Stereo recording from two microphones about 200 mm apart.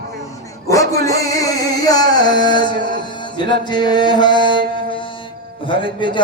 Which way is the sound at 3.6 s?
20° left (ahead or behind).